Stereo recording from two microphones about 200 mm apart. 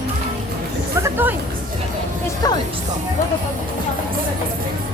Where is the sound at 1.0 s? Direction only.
10° right (ahead or behind).